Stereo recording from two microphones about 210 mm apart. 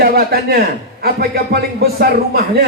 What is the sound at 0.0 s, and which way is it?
Speech, 45° right (ahead or behind).